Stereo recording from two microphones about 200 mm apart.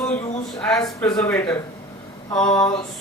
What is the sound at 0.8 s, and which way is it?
A woman's voice, 15° left (ahead or behind).